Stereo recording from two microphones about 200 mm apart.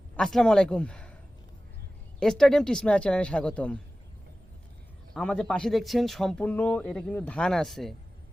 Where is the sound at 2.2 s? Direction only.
5° left (ahead or behind).